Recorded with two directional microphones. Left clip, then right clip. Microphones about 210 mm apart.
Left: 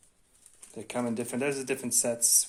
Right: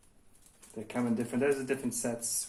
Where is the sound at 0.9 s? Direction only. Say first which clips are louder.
Left 2 dB; 50° left (ahead or behind).